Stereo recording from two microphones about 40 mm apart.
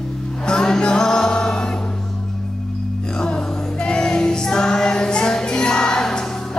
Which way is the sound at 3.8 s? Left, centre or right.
Left.